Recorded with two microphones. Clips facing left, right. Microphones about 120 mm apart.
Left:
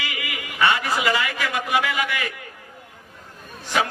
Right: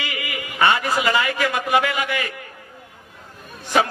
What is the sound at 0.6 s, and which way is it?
A man's voice, 35° right (ahead or behind).